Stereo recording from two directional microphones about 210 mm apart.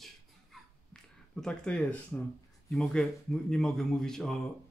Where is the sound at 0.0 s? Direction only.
Centre (ahead or behind).